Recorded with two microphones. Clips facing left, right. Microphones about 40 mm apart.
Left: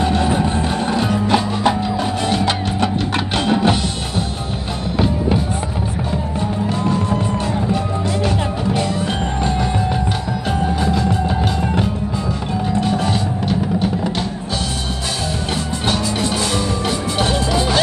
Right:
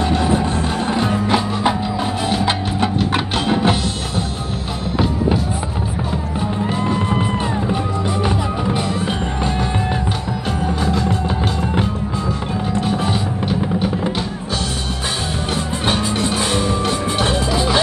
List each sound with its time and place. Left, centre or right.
0.0 s music: centre
6.8 s music: right
10.8 s music: centre
12.8 s music: centre